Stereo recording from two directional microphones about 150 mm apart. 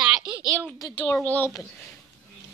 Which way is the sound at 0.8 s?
35° left (ahead or behind).